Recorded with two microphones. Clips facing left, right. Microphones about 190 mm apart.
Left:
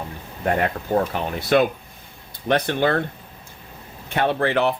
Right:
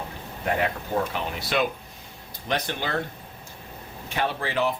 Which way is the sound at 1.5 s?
50° left (ahead or behind).